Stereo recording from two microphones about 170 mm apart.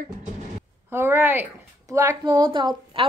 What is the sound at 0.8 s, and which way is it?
A woman's voice, 15° right (ahead or behind).